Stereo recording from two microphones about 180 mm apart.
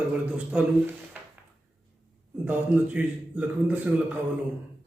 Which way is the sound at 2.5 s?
10° right (ahead or behind).